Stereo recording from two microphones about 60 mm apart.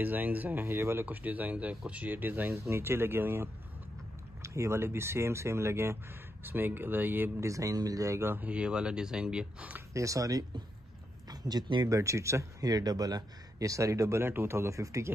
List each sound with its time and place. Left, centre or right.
0.0 s speech: right
0.7 s speech: right
1.0 s speech: right
2.5 s speech: right
4.4 s speech: right
6.4 s speech: right
7.3 s speech: right
8.4 s speech: centre
9.9 s speech: right
11.8 s speech: right